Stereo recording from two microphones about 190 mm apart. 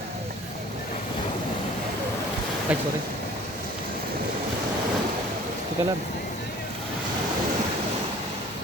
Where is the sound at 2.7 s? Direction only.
5° right (ahead or behind).